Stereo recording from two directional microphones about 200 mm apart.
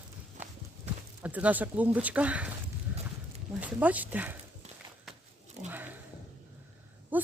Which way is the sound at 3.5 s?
5° right (ahead or behind).